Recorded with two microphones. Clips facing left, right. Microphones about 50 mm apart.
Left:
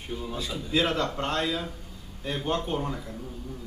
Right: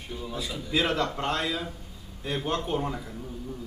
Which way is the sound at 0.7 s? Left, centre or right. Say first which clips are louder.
Even; centre.